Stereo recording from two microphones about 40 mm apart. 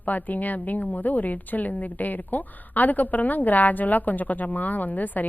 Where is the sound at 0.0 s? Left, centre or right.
Left.